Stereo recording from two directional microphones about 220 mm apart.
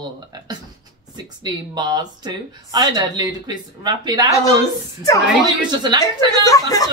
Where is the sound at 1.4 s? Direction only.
20° right (ahead or behind).